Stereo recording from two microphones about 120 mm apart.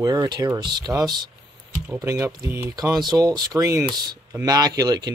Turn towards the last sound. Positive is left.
turn(degrees=-35)  # may be behind; listen again after turning